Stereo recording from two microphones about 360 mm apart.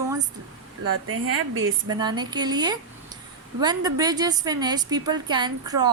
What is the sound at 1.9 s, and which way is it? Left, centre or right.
A woman's voice, centre.